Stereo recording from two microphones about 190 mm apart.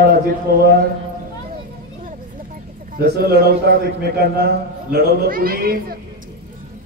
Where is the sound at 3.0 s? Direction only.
55° right (ahead or behind).